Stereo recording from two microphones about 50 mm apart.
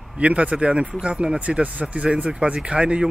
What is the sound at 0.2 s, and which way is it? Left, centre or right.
Speech, right.